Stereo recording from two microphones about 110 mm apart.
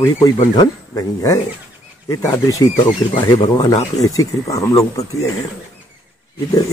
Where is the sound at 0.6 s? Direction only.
30° left (ahead or behind).